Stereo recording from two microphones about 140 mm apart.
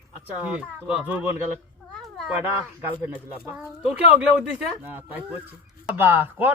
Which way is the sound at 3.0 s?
15° right (ahead or behind).